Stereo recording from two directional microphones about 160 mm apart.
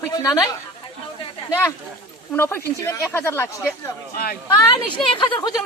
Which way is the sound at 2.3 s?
15° left (ahead or behind).